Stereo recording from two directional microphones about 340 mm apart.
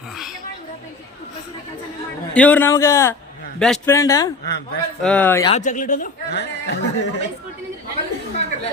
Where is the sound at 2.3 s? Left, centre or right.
Centre.